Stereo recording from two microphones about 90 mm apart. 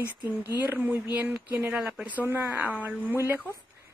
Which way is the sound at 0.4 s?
20° right (ahead or behind).